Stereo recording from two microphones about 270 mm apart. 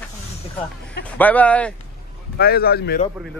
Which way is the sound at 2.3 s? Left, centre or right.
Left.